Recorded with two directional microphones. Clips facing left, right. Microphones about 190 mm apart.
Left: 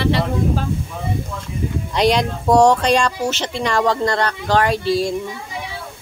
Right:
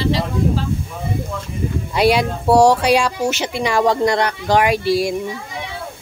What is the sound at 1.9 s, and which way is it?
Speech, 5° right (ahead or behind).